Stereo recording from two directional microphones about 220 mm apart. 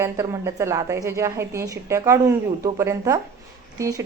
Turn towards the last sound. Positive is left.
turn(degrees=-15)  # may be behind; listen again after turning